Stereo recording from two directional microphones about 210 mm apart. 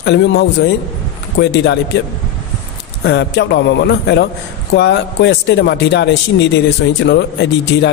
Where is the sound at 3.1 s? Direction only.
55° left (ahead or behind).